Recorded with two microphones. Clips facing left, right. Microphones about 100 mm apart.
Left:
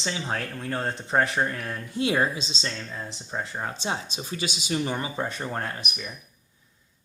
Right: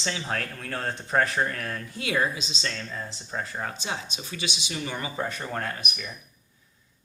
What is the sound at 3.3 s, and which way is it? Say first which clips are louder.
Speech: left 1 dB; 15° left (ahead or behind).